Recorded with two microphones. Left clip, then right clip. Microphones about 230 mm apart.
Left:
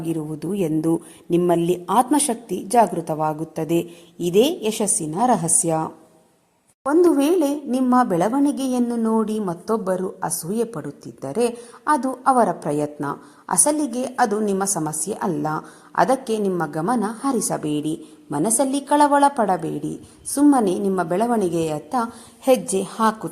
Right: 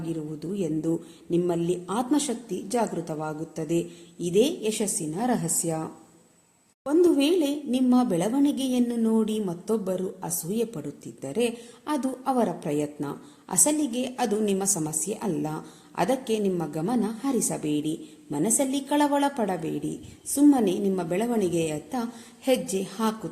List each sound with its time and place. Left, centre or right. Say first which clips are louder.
0.0 s a woman's voice: left 6 dB; left
7.2 s a woman's voice: left 5 dB; left
7.8 s a woman's voice: left 7 dB; centre